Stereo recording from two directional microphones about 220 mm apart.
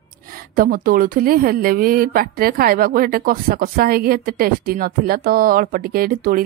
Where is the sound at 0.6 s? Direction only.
40° right (ahead or behind).